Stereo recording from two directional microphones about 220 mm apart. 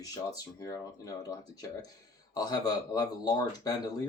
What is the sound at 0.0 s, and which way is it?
Speech, 15° left (ahead or behind).